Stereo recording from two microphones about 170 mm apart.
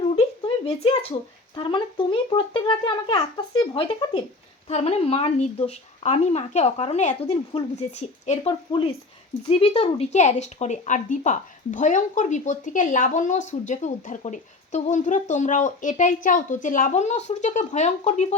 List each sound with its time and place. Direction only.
0.2 s speech: 35° left (ahead or behind)